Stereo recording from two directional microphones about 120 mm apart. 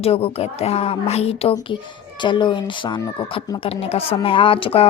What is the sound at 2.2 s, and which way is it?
Speech, 40° left (ahead or behind).